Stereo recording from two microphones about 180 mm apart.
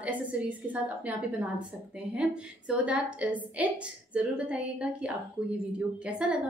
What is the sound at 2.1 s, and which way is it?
A woman's voice, 5° right (ahead or behind).